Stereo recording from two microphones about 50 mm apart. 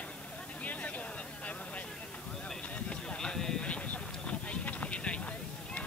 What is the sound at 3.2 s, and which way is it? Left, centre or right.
Clip-clop, centre.